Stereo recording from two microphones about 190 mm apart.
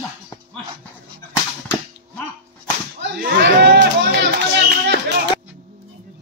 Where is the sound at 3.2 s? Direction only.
55° right (ahead or behind).